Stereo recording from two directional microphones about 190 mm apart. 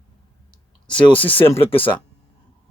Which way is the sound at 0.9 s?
30° left (ahead or behind).